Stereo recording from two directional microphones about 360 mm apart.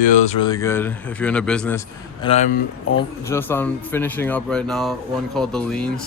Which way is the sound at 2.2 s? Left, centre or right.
Centre.